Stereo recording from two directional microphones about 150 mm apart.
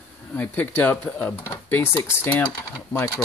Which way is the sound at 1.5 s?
25° left (ahead or behind).